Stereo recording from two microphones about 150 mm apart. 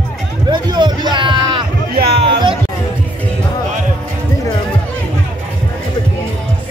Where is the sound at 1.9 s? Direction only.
90° right.